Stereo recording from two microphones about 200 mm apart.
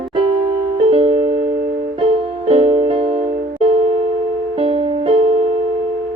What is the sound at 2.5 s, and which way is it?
Music, 30° right (ahead or behind).